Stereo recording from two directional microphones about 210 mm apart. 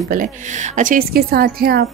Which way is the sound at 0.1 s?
35° right (ahead or behind).